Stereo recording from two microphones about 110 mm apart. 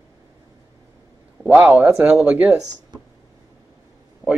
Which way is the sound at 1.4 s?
15° right (ahead or behind).